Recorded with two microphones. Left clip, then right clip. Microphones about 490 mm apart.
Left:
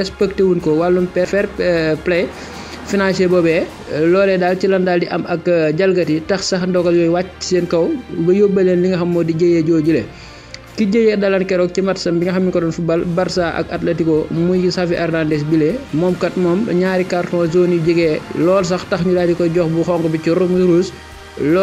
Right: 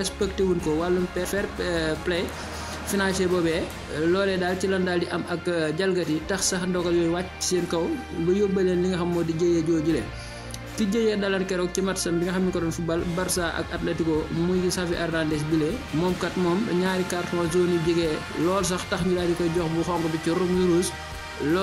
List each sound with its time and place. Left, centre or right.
0.0 s speech: right